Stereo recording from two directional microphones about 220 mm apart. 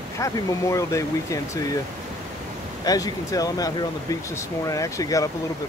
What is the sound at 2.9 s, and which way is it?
Speech, 15° left (ahead or behind).